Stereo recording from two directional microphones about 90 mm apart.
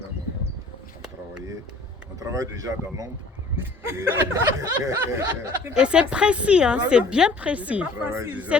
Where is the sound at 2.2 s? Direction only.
40° right (ahead or behind).